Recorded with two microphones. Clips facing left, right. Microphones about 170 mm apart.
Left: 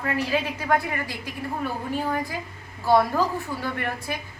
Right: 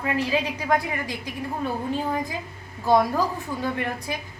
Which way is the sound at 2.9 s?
15° right (ahead or behind).